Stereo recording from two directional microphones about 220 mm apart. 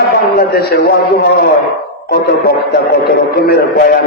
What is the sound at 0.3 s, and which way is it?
Speech, 45° left (ahead or behind).